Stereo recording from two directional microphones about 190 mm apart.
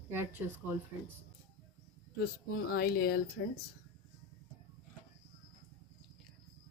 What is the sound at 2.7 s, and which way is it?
Speech, 55° left (ahead or behind).